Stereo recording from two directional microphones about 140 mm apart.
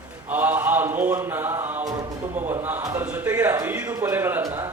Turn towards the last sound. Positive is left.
turn(degrees=-20)  # may be behind; listen again after turning